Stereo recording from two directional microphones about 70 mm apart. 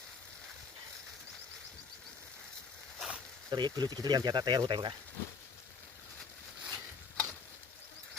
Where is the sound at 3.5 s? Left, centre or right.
Right.